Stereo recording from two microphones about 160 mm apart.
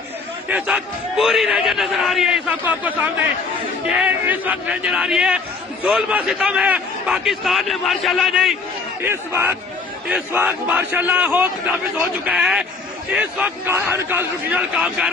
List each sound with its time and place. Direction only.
0.4 s a man's voice: 5° right (ahead or behind)
9.0 s a man's voice: 15° right (ahead or behind)
14.8 s a man's voice: centre (ahead or behind)